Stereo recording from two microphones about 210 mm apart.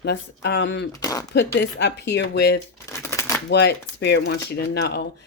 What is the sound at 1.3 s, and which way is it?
Speech, 55° left (ahead or behind).